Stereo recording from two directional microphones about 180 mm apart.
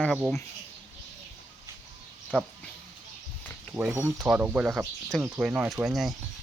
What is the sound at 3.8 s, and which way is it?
Speech, centre (ahead or behind).